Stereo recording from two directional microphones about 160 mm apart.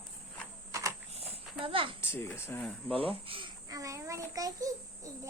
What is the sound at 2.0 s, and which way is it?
Speech, 15° left (ahead or behind).